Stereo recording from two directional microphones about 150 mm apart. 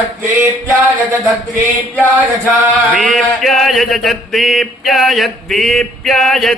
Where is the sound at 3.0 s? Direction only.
Centre (ahead or behind).